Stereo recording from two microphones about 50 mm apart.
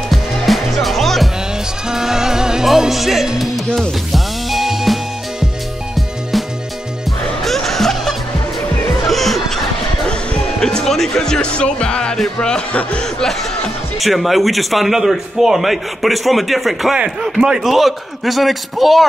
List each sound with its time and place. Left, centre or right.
0.1 s music: centre
1.9 s music: centre
10.6 s speech: centre
13.0 s a man's voice: centre